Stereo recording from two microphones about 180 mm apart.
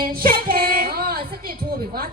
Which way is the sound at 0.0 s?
55° right (ahead or behind).